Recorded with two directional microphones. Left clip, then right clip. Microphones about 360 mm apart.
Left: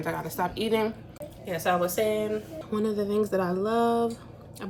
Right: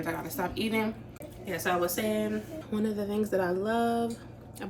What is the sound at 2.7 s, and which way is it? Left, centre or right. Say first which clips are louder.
Speech: left 5 dB; centre.